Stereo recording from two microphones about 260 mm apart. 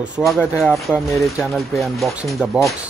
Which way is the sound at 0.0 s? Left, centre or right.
Centre.